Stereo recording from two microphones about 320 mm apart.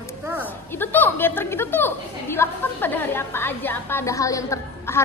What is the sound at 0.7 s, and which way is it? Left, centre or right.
A woman's voice, centre.